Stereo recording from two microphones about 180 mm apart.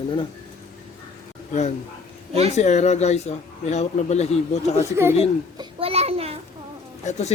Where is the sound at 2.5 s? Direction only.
40° left (ahead or behind).